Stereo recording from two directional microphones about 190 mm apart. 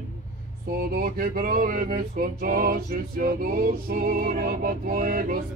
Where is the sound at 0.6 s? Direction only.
50° right (ahead or behind).